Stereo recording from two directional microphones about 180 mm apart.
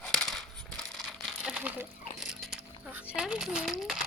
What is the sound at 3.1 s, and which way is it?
Speech, 5° right (ahead or behind).